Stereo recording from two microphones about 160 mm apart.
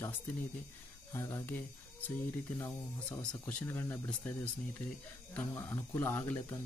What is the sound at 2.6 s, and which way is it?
Speech, 5° left (ahead or behind).